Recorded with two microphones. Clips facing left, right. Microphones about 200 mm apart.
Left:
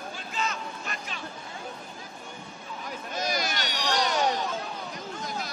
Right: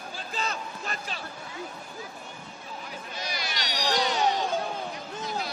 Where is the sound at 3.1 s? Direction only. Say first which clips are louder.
Left 7 dB; 45° left (ahead or behind).